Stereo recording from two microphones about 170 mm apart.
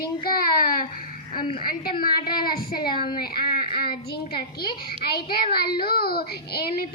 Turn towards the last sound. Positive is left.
turn(degrees=65)  # may be behind; listen again after turning